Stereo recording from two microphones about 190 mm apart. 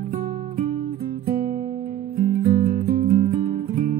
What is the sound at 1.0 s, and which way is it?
Music, 50° right (ahead or behind).